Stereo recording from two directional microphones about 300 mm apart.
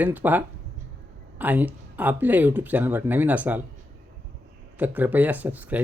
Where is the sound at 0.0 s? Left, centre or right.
Centre.